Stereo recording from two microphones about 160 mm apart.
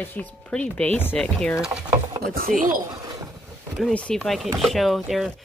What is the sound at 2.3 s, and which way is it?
Speech, 60° right (ahead or behind).